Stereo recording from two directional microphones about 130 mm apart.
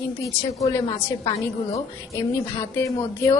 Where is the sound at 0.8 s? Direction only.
35° left (ahead or behind).